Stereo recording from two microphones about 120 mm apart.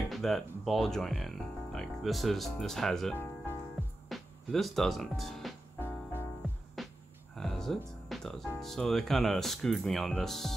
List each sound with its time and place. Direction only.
0.1 s speech: centre (ahead or behind)
5.8 s music: 20° left (ahead or behind)
6.8 s music: centre (ahead or behind)
8.5 s speech: centre (ahead or behind)